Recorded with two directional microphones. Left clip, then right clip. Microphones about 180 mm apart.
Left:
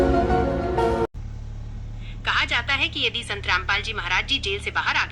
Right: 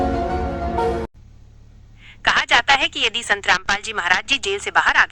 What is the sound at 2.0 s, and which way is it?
A woman's voice, 45° right (ahead or behind).